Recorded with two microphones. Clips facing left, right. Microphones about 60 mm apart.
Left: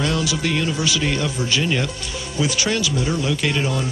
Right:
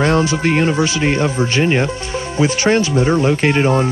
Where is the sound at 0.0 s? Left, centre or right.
Right.